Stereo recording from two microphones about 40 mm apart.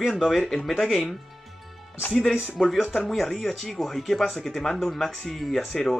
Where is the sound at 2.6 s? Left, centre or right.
Centre.